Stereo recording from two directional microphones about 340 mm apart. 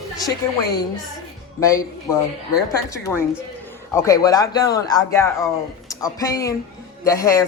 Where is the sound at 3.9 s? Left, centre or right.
Centre.